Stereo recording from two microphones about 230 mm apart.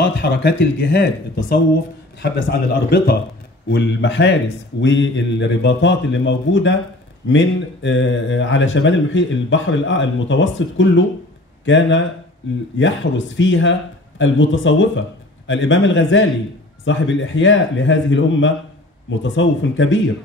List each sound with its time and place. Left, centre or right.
0.2 s speech: left